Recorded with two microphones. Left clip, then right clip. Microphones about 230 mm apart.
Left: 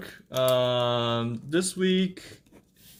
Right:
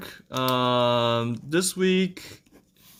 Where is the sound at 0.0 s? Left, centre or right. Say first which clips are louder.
Left 2 dB; right.